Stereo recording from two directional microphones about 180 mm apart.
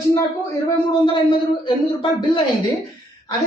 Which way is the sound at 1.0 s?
25° left (ahead or behind).